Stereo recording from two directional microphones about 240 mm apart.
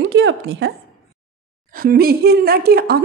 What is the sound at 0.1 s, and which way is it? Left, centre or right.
Speech, right.